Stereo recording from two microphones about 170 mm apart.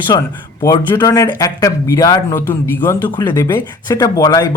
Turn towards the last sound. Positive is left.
turn(degrees=20)  # may be behind; listen again after turning